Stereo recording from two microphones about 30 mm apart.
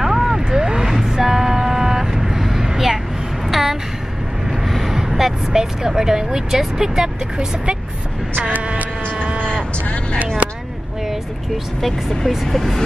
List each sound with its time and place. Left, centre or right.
0.0 s vehicle: centre
3.4 s a sound: centre
4.6 s vehicle: centre
4.9 s vehicle: centre
6.8 s speech: centre
8.7 s a sound: right
11.1 s vehicle: centre
12.4 s speech: centre